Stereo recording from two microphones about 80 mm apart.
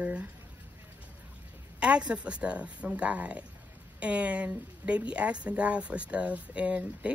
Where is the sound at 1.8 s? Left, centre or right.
Centre.